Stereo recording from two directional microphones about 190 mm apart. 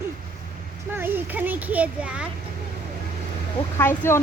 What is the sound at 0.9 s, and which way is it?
A child's voice, 10° right (ahead or behind).